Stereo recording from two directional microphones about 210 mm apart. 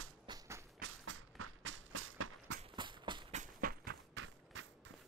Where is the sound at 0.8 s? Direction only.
70° right (ahead or behind).